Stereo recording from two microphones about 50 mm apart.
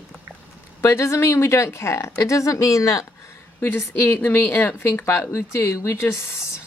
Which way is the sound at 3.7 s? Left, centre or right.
Left.